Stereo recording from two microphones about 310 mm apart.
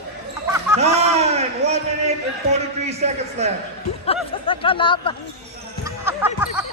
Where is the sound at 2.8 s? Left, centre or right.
Right.